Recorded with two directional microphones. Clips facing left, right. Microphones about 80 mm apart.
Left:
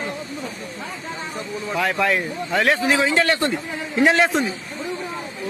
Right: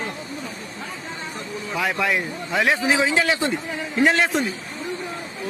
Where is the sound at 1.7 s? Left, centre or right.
Centre.